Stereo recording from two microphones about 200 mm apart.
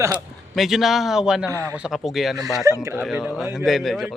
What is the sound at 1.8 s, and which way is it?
A man's voice, centre (ahead or behind).